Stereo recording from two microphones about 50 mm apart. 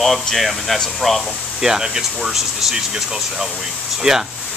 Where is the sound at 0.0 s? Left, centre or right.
Centre.